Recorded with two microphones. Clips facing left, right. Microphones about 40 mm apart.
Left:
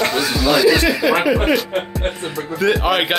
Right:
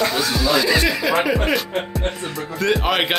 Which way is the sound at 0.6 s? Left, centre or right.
Centre.